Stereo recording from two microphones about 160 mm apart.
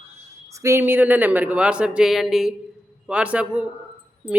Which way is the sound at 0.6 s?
15° right (ahead or behind).